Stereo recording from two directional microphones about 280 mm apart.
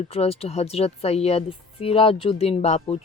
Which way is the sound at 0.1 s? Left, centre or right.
Left.